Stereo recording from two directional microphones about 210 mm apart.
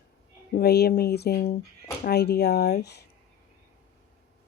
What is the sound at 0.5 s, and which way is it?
Speech, 50° left (ahead or behind).